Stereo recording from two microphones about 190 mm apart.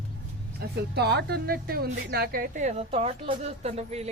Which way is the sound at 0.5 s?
55° right (ahead or behind).